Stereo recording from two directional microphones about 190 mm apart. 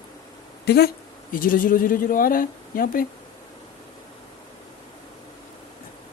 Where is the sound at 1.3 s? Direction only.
45° left (ahead or behind).